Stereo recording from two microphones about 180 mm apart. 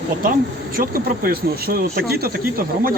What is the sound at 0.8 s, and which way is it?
Speech, 55° right (ahead or behind).